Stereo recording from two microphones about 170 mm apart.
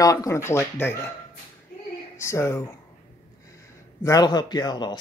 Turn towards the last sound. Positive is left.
turn(degrees=25)  # may be behind; listen again after turning